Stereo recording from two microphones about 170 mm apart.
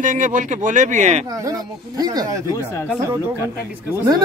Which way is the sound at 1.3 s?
20° right (ahead or behind).